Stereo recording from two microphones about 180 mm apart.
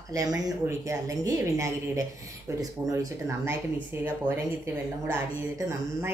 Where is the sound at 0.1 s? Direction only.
20° right (ahead or behind).